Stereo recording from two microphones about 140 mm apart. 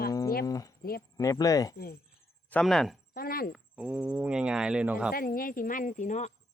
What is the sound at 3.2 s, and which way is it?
Speech, 90° left.